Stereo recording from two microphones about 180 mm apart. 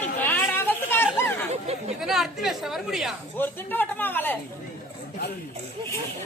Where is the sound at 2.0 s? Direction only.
Centre (ahead or behind).